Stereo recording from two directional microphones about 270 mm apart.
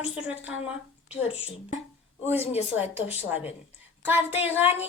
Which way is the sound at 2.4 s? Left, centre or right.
Left.